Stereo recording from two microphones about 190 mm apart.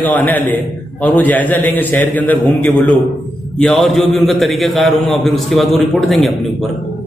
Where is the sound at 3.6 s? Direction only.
Centre (ahead or behind).